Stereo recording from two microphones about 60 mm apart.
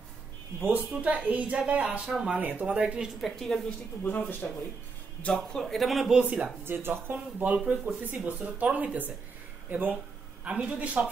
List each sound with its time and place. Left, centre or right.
0.6 s speech: right
3.2 s a woman's voice: centre
4.0 s speech: left
5.2 s a man's voice: centre
6.6 s speech: right